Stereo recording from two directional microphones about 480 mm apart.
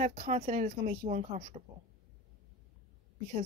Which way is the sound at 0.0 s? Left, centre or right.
Centre.